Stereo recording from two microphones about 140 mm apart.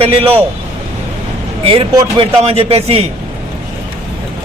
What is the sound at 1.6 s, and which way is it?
A man's voice, 40° right (ahead or behind).